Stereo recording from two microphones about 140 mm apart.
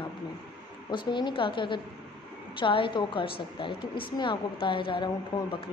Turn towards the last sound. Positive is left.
turn(degrees=35)  # may be behind; listen again after turning